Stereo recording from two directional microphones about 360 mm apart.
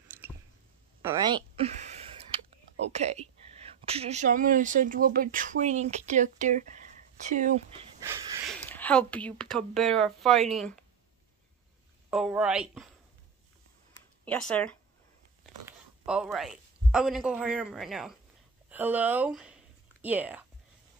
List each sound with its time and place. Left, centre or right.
0.1 s squish: centre
1.0 s speech: centre
2.3 s a sound: centre
2.9 s speech: centre
8.0 s a sound: centre
8.5 s speech: centre
12.1 s speech: centre
14.2 s speech: centre